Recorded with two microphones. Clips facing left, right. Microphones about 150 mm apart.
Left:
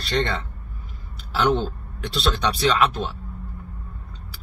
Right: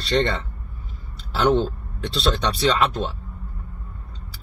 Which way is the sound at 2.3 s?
Centre (ahead or behind).